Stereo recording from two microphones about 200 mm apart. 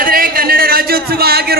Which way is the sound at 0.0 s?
45° right (ahead or behind).